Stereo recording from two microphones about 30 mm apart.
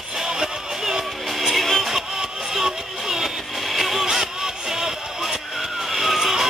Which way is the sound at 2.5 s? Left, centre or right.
Centre.